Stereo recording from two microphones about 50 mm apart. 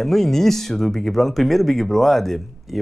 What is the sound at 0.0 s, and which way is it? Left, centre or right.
Speech, centre.